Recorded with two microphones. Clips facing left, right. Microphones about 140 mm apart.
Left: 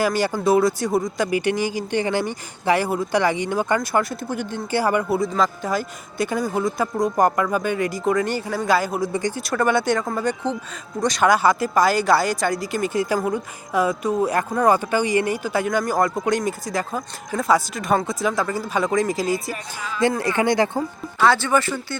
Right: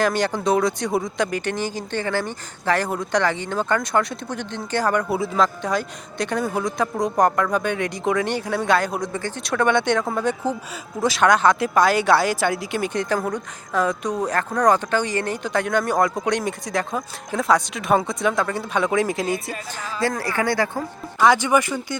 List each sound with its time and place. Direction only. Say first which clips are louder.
0.0 s speech: left 1 dB; 5° left (ahead or behind)
9.1 s speech: left 4 dB; 15° left (ahead or behind)
9.4 s speech: right 2 dB; centre (ahead or behind)
20.0 s speech: left 3 dB; 20° left (ahead or behind)
21.2 s speech: right 1 dB; 15° right (ahead or behind)